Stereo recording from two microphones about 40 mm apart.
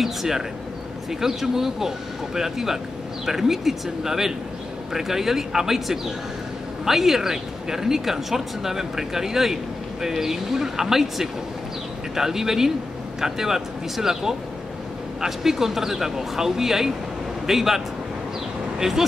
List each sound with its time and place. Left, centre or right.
0.0 s speech: centre